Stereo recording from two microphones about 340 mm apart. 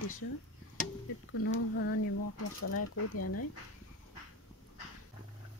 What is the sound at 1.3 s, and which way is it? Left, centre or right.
Speech, left.